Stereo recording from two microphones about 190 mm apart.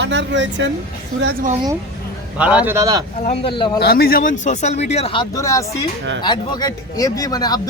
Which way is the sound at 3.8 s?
55° left (ahead or behind).